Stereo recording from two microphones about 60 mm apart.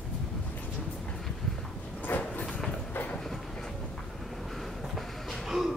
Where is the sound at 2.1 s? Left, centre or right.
Left.